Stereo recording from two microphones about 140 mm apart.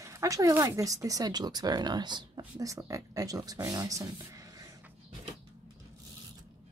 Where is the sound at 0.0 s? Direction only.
20° right (ahead or behind).